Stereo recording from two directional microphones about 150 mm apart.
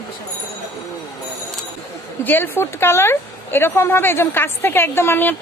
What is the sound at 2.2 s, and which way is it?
A woman's voice, 15° left (ahead or behind).